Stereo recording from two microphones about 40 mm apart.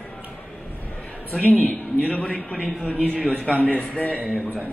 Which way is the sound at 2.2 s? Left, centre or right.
Left.